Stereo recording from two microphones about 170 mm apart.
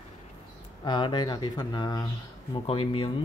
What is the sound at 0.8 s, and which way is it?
Speech, 25° left (ahead or behind).